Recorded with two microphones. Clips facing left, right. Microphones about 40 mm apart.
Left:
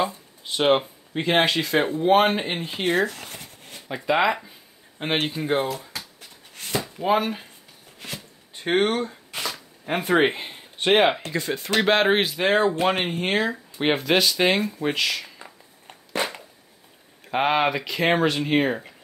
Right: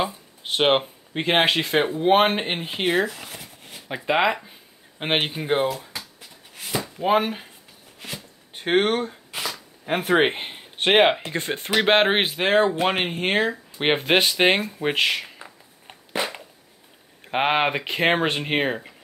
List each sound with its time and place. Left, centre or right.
0.6 s speech: right; by 3.8 s centre
3.9 s speech: centre
4.5 s speech: right
5.9 s a sound: centre
7.1 s speech: centre
8.0 s a sound: centre
8.5 s speech: centre
9.3 s shuffling cards: centre
10.3 s speech: right
11.3 s speech: right
11.8 s speech: right
12.4 s speech: centre; by 15.3 s right
17.2 s speech: right